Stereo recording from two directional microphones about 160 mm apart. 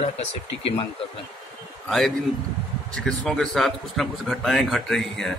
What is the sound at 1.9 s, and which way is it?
A man's voice, centre (ahead or behind).